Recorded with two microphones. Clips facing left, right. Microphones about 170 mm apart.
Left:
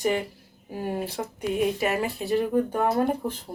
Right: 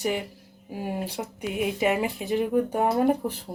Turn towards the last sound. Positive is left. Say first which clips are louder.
# right 1 dB
turn(degrees=-10)  # may be behind; listen again after turning